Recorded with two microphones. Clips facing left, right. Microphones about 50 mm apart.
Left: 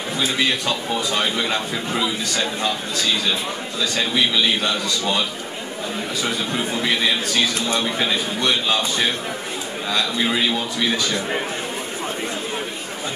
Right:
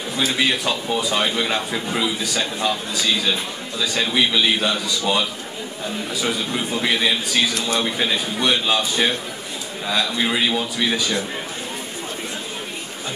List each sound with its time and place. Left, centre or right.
0.4 s speech: centre
3.8 s speech: centre
6.2 s speech: centre